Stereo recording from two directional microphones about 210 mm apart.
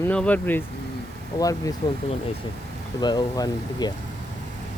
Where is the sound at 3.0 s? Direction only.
20° left (ahead or behind).